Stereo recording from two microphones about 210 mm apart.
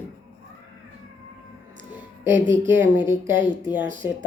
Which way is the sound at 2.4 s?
35° right (ahead or behind).